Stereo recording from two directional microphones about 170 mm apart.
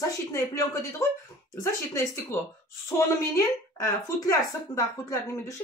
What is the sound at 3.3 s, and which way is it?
Speech, 20° left (ahead or behind).